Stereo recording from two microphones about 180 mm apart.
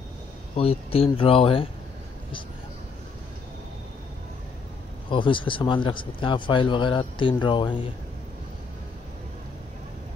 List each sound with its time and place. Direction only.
0.6 s speech: 30° left (ahead or behind)
5.1 s speech: 25° left (ahead or behind)